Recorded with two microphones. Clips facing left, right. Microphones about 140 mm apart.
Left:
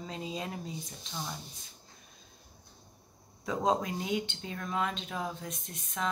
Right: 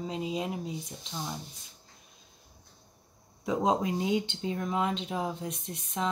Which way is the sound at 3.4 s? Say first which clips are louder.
Right 2 dB; 20° right (ahead or behind).